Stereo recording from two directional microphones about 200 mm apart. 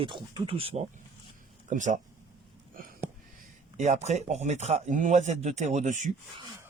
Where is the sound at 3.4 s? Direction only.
35° right (ahead or behind).